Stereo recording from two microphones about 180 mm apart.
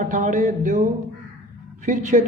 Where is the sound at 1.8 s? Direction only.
45° right (ahead or behind).